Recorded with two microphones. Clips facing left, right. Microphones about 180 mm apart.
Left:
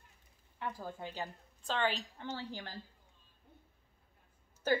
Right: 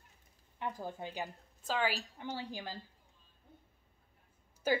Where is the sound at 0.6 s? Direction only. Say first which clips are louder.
Right 2 dB; 20° right (ahead or behind).